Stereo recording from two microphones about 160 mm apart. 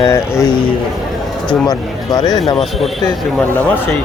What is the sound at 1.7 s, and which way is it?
Speech, 25° left (ahead or behind).